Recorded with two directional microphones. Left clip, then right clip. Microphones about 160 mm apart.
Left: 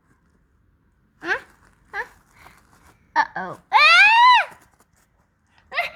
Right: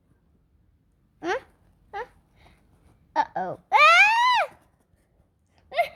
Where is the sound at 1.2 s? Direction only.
55° right (ahead or behind).